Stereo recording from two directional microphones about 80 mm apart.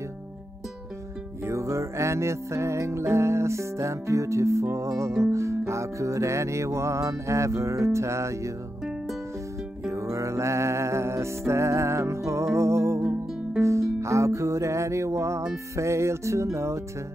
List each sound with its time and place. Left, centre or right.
1.4 s music: right
9.8 s music: right